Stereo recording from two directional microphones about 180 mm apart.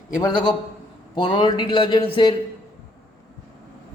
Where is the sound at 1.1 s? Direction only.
25° left (ahead or behind).